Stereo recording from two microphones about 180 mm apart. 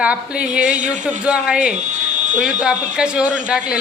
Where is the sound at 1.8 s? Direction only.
40° right (ahead or behind).